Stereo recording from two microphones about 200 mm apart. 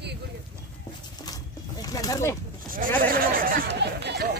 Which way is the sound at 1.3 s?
20° left (ahead or behind).